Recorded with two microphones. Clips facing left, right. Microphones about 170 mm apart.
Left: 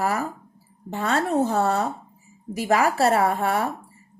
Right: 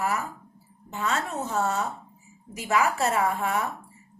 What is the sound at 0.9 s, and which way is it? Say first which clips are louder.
A woman's voice: left 7 dB; 35° left (ahead or behind).